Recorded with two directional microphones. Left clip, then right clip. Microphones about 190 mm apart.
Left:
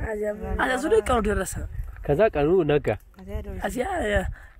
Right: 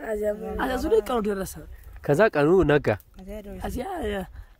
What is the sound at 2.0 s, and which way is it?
Speech, 30° right (ahead or behind).